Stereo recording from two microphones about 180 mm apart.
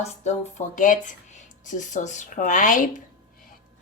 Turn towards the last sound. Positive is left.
turn(degrees=45)  # may be behind; listen again after turning